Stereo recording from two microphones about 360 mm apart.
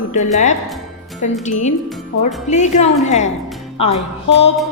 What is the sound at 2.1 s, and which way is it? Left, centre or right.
Speech, left.